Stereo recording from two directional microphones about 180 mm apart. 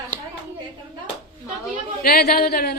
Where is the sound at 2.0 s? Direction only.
55° left (ahead or behind).